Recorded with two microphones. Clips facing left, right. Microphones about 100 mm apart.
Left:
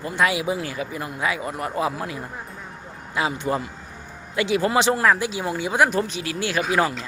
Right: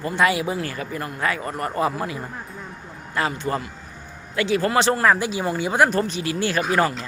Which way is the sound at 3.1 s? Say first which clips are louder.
Even; 10° left (ahead or behind).